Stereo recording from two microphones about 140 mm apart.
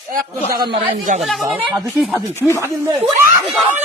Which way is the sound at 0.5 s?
35° right (ahead or behind).